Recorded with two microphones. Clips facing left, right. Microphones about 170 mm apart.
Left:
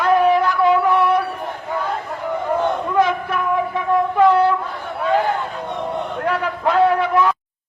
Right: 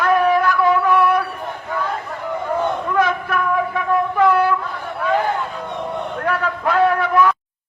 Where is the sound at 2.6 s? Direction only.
20° left (ahead or behind).